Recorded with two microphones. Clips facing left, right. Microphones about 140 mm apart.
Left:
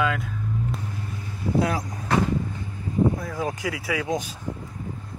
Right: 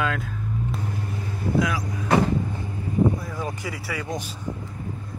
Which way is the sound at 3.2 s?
55° left (ahead or behind).